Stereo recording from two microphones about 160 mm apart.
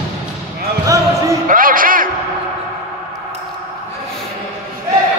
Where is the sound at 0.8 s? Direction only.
20° right (ahead or behind).